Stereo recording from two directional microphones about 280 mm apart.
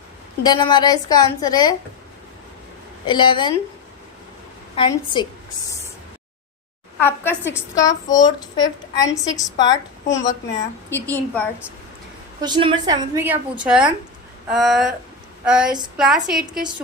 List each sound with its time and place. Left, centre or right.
0.4 s a woman's voice: centre
3.1 s a woman's voice: centre
4.7 s a woman's voice: centre
7.0 s a woman's voice: centre
12.4 s a woman's voice: centre